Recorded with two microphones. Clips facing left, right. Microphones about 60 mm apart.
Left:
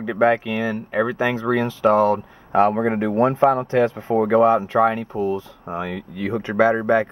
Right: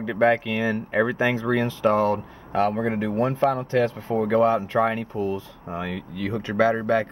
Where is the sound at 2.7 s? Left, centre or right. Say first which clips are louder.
Left 4 dB; left.